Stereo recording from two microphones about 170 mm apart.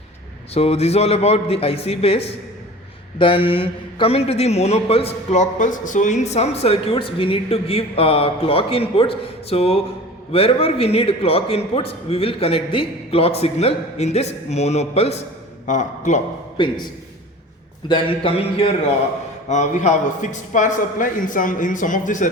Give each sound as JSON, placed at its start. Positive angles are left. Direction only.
{"t": 0.5, "sound": "a man's voice", "side_deg": 35}
{"t": 16.6, "sound": "a man's voice", "side_deg": 25}
{"t": 19.5, "sound": "speech", "side_deg": 45}